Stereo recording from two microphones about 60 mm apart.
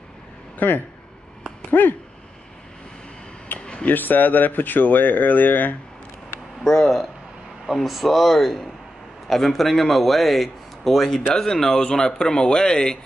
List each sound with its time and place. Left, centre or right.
0.6 s speech: left
3.5 s a sound: left
3.8 s speech: left
6.6 s a man's voice: centre